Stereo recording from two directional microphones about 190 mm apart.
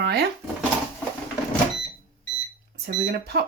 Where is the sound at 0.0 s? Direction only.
55° right (ahead or behind).